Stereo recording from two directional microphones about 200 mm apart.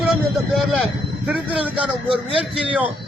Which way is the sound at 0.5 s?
5° right (ahead or behind).